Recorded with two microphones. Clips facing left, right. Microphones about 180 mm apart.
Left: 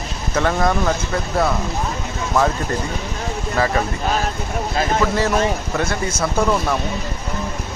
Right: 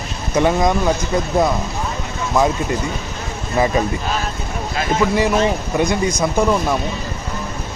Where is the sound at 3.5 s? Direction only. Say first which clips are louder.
Right 3 dB; 20° right (ahead or behind).